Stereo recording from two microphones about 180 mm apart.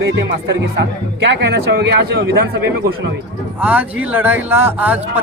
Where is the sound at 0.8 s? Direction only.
75° right (ahead or behind).